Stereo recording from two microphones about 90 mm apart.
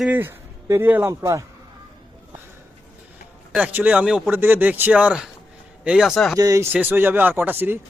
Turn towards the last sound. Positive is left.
turn(degrees=-20)  # may be behind; listen again after turning